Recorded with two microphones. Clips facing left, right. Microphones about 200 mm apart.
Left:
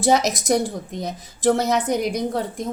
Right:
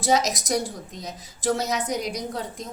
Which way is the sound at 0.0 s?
60° left (ahead or behind).